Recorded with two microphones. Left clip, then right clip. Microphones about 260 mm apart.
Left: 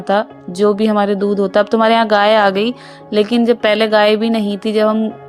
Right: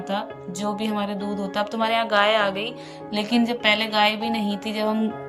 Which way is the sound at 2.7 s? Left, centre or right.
Centre.